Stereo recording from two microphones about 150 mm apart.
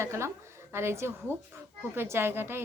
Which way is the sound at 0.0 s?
20° right (ahead or behind).